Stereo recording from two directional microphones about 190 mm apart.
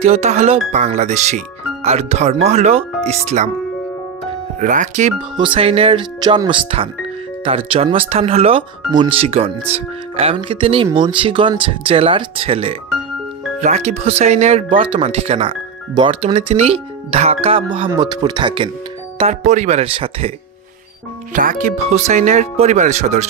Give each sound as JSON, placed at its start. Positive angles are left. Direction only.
{"t": 0.0, "sound": "speech", "side_deg": -35}
{"t": 4.6, "sound": "speech", "side_deg": -40}
{"t": 5.4, "sound": "speech", "side_deg": -30}
{"t": 19.1, "sound": "speech", "side_deg": -35}
{"t": 21.3, "sound": "speech", "side_deg": -45}